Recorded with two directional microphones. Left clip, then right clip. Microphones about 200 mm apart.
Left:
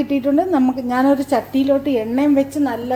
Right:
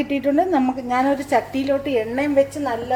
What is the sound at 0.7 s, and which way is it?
A woman's voice, 10° left (ahead or behind).